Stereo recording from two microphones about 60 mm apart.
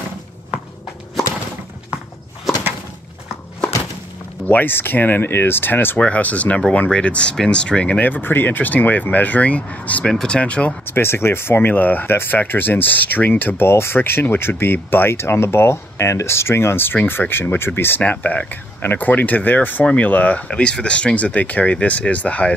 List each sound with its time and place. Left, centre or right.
4.5 s speech: left
5.9 s speech: left
8.1 s speech: left
10.0 s speech: centre
10.9 s speech: left
13.7 s speech: left